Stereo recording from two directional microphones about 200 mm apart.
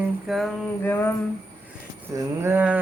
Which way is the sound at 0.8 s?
10° left (ahead or behind).